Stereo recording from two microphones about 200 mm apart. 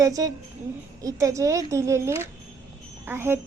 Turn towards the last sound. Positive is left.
turn(degrees=-10)  # may be behind; listen again after turning